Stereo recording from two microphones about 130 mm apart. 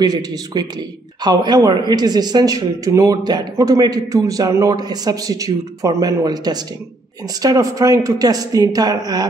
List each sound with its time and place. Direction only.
0.0 s a man's voice: 30° right (ahead or behind)